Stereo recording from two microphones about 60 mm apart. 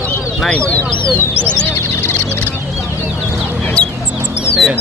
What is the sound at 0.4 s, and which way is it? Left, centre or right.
Speech, centre.